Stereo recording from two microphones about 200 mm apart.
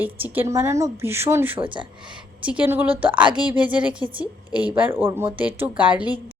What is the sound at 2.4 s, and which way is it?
A woman's voice, 5° right (ahead or behind).